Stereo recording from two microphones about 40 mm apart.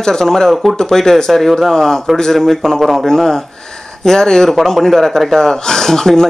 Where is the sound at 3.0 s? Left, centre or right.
Centre.